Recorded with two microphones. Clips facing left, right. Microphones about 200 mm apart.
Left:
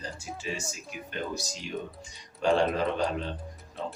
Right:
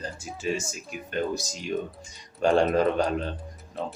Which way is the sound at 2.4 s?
45° right (ahead or behind).